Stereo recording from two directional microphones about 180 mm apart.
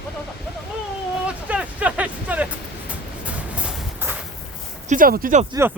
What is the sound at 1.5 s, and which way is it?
Music, 10° right (ahead or behind).